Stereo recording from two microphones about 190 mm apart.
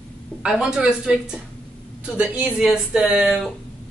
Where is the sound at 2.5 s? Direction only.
5° right (ahead or behind).